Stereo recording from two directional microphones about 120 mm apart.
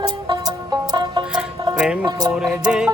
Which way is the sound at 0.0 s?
35° right (ahead or behind).